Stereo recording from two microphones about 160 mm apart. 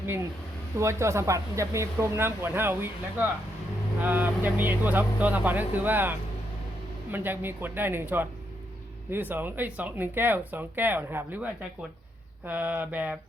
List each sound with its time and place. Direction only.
0.8 s speech: 15° right (ahead or behind)
12.5 s speech: 10° right (ahead or behind)